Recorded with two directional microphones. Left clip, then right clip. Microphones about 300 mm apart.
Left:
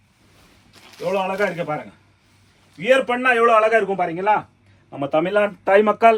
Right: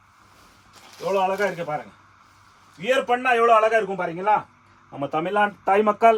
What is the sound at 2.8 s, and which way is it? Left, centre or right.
A man's voice, centre.